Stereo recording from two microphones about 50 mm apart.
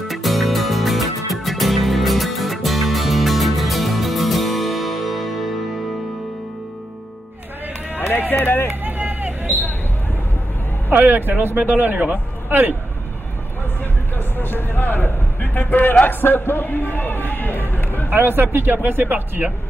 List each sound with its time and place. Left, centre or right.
0.1 s music: centre
8.3 s speech: left
8.8 s vehicle: right
10.9 s speech: right
14.1 s a sound: left
18.1 s speech: right